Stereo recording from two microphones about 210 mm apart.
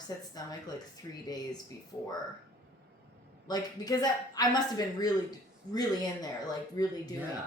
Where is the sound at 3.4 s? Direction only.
20° left (ahead or behind).